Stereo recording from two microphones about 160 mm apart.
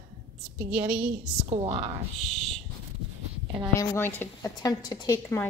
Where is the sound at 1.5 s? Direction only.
35° right (ahead or behind).